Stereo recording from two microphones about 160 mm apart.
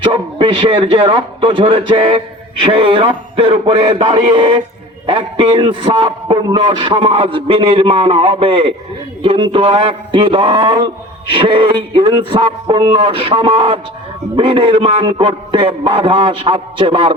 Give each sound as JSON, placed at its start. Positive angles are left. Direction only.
{"t": 0.0, "sound": "a man's voice", "side_deg": -30}